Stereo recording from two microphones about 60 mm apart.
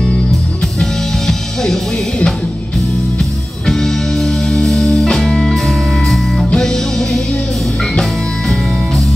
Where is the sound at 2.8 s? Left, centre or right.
Centre.